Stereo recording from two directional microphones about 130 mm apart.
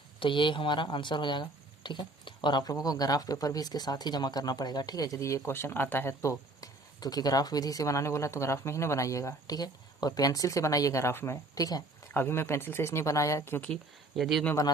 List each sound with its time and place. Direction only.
0.2 s speech: 40° left (ahead or behind)
12.1 s speech: 15° left (ahead or behind)
14.2 s speech: centre (ahead or behind)